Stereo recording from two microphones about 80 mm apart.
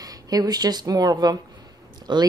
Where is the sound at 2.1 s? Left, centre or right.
Right.